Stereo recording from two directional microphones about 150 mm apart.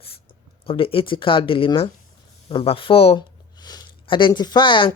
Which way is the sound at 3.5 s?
30° left (ahead or behind).